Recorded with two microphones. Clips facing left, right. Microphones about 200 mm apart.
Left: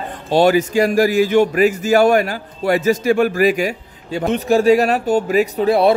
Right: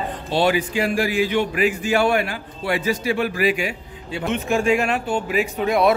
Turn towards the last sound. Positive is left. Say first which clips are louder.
# left 5 dB
turn(degrees=35)  # may be behind; listen again after turning